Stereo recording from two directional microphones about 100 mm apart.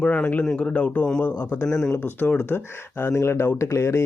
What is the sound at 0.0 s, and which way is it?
Speech, 10° left (ahead or behind).